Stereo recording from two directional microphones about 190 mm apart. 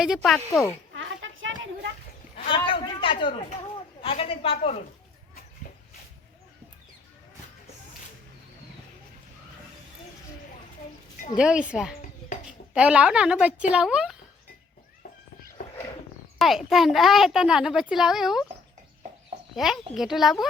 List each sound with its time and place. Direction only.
0.0 s a child's voice: centre (ahead or behind)
0.9 s a sound: 90° right
2.6 s a sound: 25° left (ahead or behind)
4.0 s a woman's voice: 30° left (ahead or behind)
11.3 s a child's voice: 5° right (ahead or behind)
16.4 s a child's voice: centre (ahead or behind)
19.5 s a child's voice: centre (ahead or behind)